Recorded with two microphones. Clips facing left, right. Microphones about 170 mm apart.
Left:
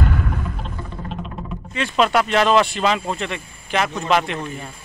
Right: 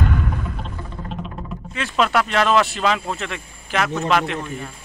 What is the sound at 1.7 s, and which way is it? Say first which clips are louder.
Speech: left 2 dB; centre (ahead or behind).